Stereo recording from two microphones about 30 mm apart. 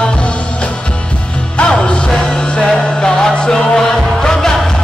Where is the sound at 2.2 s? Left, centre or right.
Left; by 4.6 s centre.